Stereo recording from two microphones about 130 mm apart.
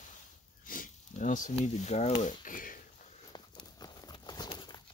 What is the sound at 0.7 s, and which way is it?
Speech, 85° left.